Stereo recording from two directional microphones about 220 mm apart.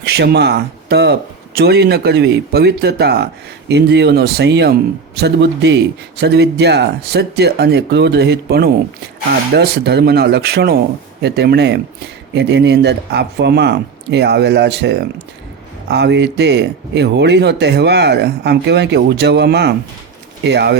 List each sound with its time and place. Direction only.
0.0 s speech: 50° right (ahead or behind)